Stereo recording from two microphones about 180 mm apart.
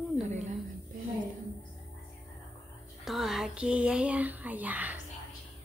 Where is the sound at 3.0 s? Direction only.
Centre (ahead or behind).